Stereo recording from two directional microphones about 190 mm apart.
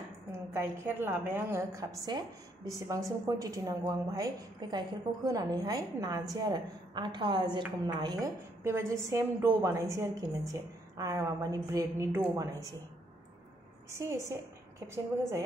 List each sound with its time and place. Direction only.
0.3 s a woman's voice: 15° right (ahead or behind)
13.8 s a woman's voice: 15° right (ahead or behind)